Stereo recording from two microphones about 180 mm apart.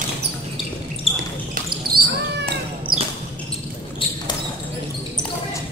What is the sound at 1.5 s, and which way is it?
Basketball bounce, 55° right (ahead or behind).